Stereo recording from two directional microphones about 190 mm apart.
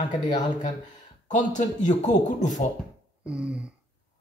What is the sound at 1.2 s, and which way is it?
Speech, 40° left (ahead or behind).